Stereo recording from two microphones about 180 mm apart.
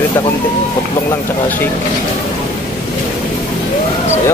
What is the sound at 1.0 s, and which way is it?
Speech, 10° left (ahead or behind).